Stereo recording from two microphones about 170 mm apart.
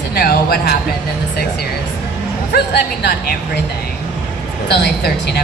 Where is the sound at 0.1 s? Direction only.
65° left (ahead or behind).